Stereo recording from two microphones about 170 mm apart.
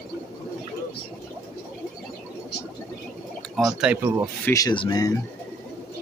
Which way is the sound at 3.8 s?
10° right (ahead or behind).